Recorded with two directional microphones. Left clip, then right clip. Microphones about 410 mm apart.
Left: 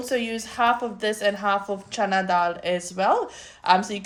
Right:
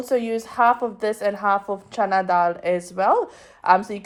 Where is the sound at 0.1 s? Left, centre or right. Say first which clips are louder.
Right 5 dB; centre.